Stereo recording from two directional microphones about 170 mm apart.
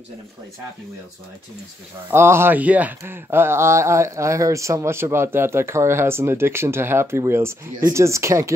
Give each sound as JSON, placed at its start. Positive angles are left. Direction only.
{"t": 2.0, "sound": "speech", "side_deg": -15}